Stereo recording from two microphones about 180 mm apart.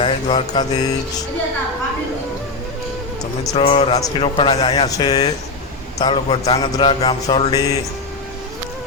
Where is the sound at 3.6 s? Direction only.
30° left (ahead or behind).